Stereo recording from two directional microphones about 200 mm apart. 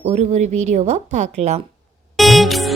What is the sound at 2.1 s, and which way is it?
Music, centre (ahead or behind).